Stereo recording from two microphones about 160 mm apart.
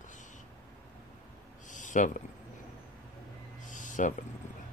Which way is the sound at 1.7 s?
50° left (ahead or behind).